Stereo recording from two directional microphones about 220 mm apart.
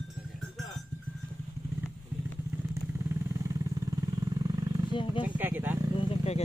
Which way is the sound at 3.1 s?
15° right (ahead or behind).